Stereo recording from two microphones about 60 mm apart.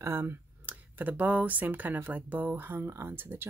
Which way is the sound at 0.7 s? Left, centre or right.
Right.